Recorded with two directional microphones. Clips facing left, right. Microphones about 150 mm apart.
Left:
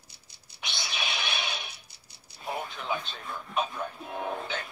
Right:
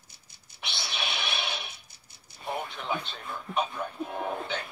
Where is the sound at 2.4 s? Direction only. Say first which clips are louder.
Even; centre (ahead or behind).